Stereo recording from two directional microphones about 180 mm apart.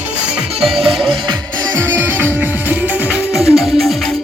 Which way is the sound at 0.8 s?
Centre (ahead or behind).